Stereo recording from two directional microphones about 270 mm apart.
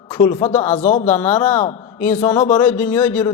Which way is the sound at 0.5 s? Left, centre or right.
Left.